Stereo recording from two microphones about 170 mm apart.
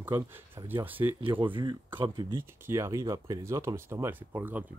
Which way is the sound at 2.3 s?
15° right (ahead or behind).